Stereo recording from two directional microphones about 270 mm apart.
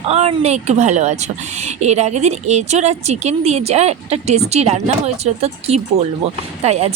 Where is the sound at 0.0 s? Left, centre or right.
Right.